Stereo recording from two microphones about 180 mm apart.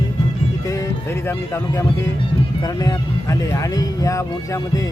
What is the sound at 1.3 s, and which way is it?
Speech, 15° left (ahead or behind).